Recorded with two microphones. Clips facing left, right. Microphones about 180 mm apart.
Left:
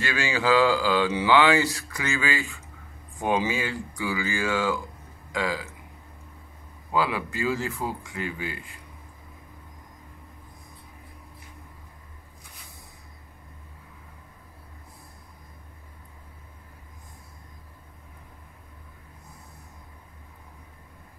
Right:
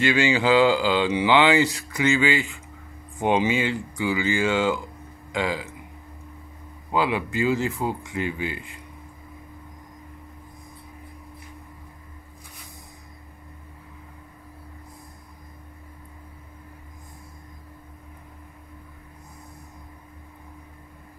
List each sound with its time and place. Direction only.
0.0 s speech: 20° right (ahead or behind)
6.9 s speech: 20° right (ahead or behind)